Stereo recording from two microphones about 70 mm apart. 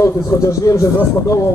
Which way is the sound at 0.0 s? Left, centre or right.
Left.